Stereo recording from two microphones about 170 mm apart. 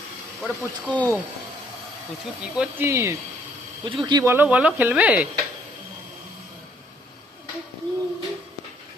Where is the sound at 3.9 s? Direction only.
30° right (ahead or behind).